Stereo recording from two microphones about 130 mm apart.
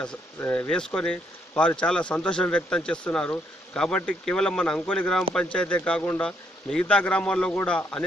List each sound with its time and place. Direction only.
0.4 s a man's voice: 20° left (ahead or behind)
0.7 s a man's voice: 5° left (ahead or behind)